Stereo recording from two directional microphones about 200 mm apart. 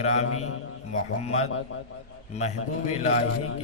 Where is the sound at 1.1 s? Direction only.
35° left (ahead or behind).